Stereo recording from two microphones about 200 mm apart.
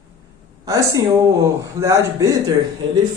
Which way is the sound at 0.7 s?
15° right (ahead or behind).